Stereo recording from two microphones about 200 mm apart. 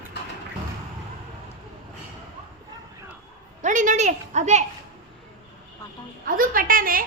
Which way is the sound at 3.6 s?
40° right (ahead or behind).